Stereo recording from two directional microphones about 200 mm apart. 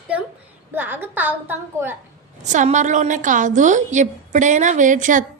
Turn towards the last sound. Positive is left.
turn(degrees=-40)  # may be behind; listen again after turning